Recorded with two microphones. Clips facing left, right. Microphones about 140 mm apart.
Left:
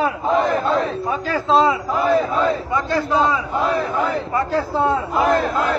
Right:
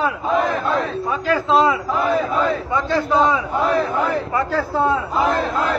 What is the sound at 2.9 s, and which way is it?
Speech, centre (ahead or behind).